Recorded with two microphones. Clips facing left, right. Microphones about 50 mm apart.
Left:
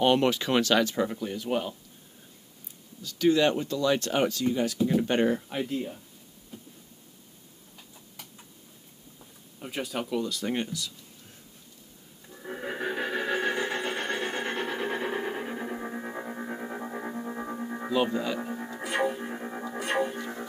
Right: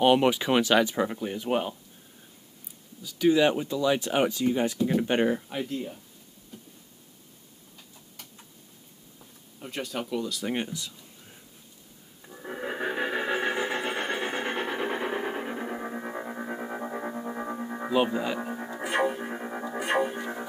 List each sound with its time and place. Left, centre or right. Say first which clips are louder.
0.0 s speech: right 2 dB; centre
3.0 s speech: right 1 dB; centre
5.5 s speech: left 1 dB; centre
9.2 s speech: left 1 dB; centre
10.5 s speech: right 1 dB; centre
12.3 s a sound: right 1 dB; centre